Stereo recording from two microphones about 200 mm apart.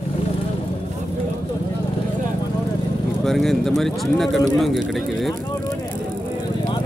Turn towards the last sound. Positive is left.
turn(degrees=0)  # may be behind; listen again after turning